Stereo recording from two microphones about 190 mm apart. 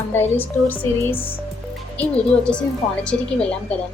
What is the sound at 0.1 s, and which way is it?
A woman's voice, 10° left (ahead or behind).